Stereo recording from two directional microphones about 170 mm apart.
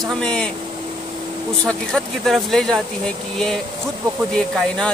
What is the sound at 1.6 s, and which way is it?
Speech, 5° left (ahead or behind).